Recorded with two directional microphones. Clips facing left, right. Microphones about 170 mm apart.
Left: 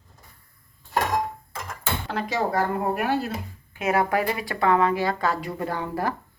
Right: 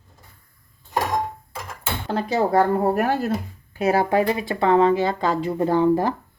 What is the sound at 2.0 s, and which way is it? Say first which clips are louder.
Speech: right 6 dB; 30° right (ahead or behind).